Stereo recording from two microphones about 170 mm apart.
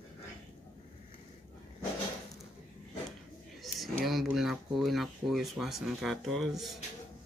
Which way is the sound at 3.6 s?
Centre (ahead or behind).